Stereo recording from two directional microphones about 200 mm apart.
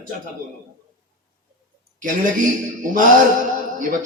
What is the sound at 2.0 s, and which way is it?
A man's voice, 40° right (ahead or behind).